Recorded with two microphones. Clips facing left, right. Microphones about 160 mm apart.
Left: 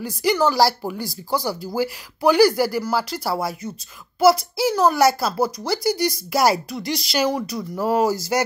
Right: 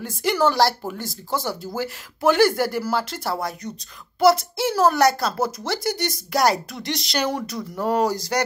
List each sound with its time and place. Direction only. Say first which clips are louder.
0.0 s a child's voice: left 1 dB; centre (ahead or behind)